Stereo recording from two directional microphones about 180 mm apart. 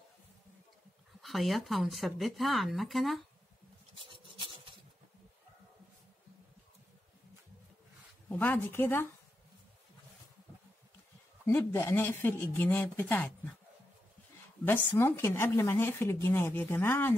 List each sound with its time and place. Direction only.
1.2 s speech: centre (ahead or behind)
3.9 s filing: 30° right (ahead or behind)
8.3 s speech: 10° left (ahead or behind)
11.4 s speech: 10° left (ahead or behind)
14.6 s speech: 10° left (ahead or behind)